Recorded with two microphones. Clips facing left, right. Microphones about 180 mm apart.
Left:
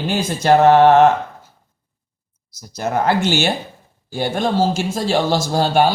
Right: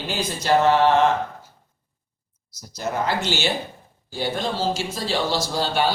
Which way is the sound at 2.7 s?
55° left (ahead or behind).